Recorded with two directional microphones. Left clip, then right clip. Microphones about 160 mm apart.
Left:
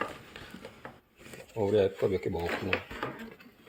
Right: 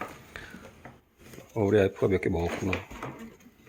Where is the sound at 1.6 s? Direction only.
35° right (ahead or behind).